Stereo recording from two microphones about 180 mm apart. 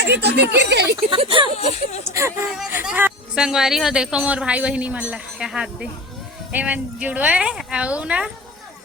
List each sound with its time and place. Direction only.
0.0 s speech: 70° right (ahead or behind)
0.9 s speech: 30° right (ahead or behind)
1.5 s speech: 35° left (ahead or behind)
2.0 s a woman's voice: 15° right (ahead or behind)